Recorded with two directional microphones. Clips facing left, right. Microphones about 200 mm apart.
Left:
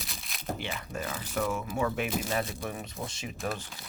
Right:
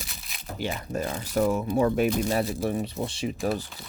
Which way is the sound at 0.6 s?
40° right (ahead or behind).